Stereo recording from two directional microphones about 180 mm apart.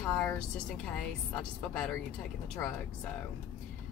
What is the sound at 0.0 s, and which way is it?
Speech, 15° left (ahead or behind).